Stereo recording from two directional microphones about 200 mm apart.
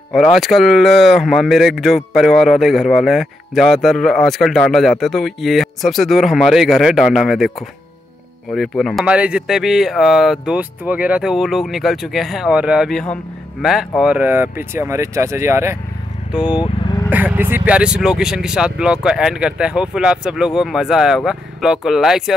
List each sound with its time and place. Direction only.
0.1 s speech: centre (ahead or behind)
16.5 s speech: 25° left (ahead or behind)
17.1 s speech: 10° right (ahead or behind)